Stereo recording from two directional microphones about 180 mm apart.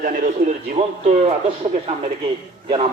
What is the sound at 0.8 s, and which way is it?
Speech, 30° right (ahead or behind).